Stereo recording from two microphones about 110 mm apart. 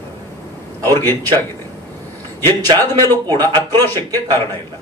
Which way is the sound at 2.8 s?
20° left (ahead or behind).